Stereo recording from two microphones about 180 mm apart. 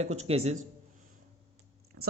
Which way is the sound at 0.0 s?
35° right (ahead or behind).